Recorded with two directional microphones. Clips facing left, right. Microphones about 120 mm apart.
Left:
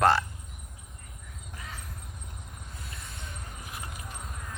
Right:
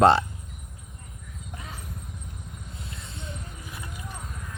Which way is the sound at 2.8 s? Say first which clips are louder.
Right 3 dB; 25° right (ahead or behind).